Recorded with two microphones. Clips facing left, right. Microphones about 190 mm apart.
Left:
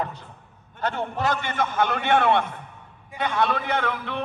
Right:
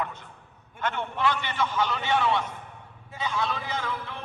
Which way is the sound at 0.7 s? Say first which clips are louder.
Left 3 dB; 35° left (ahead or behind).